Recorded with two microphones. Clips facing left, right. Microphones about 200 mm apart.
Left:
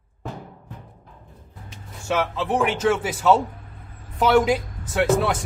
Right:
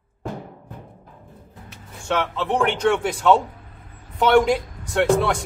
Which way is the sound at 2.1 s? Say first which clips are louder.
Even; 5° left (ahead or behind).